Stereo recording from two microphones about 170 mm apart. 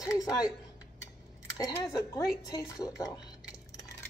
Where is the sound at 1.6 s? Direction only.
20° left (ahead or behind).